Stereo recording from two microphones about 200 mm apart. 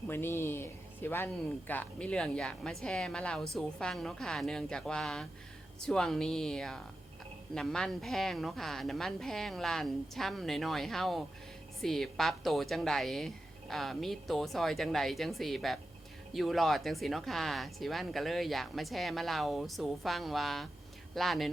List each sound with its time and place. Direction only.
0.1 s speech: 10° left (ahead or behind)